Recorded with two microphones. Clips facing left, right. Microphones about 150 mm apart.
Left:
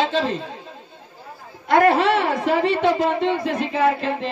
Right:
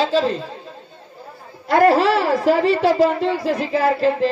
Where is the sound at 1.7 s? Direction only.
35° right (ahead or behind).